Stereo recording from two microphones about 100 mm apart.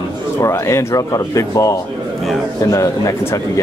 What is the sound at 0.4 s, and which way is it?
Speech, 30° left (ahead or behind).